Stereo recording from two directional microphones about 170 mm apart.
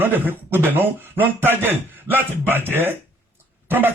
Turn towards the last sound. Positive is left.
turn(degrees=-10)  # may be behind; listen again after turning